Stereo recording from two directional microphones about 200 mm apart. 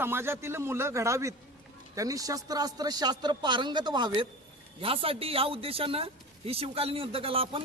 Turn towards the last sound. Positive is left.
turn(degrees=-30)  # may be behind; listen again after turning